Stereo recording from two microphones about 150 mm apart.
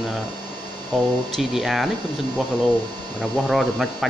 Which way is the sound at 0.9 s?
Centre (ahead or behind).